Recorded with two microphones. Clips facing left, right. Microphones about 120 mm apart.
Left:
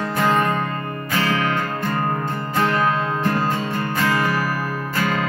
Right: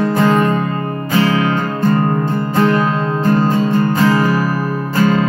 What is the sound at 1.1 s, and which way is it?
Music, 25° right (ahead or behind).